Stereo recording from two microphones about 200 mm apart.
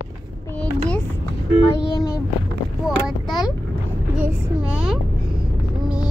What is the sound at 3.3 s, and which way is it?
Vehicle, centre (ahead or behind).